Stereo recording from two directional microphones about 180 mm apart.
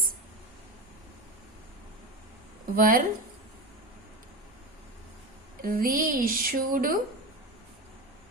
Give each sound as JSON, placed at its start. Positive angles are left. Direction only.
{"t": 2.7, "sound": "speech", "side_deg": -50}
{"t": 5.6, "sound": "speech", "side_deg": -50}